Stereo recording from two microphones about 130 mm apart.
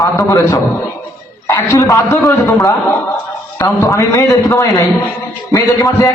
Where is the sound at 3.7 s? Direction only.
25° left (ahead or behind).